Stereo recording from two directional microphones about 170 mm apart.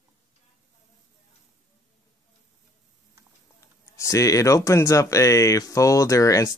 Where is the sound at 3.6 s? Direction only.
20° left (ahead or behind).